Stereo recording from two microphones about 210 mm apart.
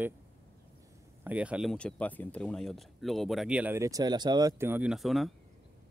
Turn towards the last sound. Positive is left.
turn(degrees=0)  # may be behind; listen again after turning